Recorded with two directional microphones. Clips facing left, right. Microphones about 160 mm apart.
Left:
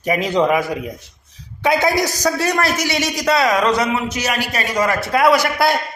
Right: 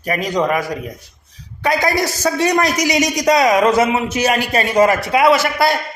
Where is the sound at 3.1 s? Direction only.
20° right (ahead or behind).